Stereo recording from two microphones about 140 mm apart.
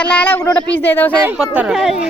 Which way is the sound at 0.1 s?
10° left (ahead or behind).